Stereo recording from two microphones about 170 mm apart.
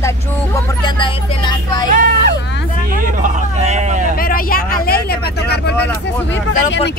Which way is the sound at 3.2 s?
45° right (ahead or behind).